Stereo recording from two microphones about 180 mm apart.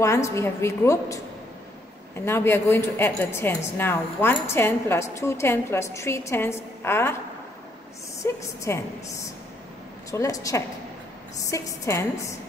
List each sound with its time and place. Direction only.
0.0 s a woman's voice: 15° left (ahead or behind)
2.2 s a woman's voice: 15° left (ahead or behind)
8.2 s a woman's voice: 15° left (ahead or behind)